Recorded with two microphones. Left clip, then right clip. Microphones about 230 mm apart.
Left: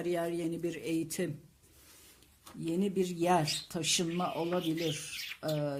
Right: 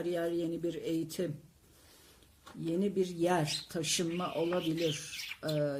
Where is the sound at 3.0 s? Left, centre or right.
Left.